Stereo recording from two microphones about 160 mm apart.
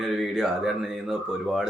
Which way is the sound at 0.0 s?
Centre (ahead or behind).